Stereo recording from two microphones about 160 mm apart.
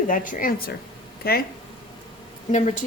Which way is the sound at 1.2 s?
70° left (ahead or behind).